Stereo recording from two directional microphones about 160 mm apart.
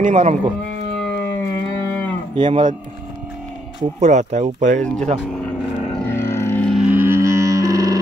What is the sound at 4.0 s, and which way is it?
Speech, 45° right (ahead or behind).